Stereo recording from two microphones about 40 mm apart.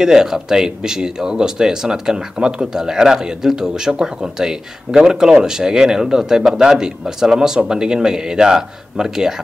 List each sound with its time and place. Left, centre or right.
0.0 s speech: centre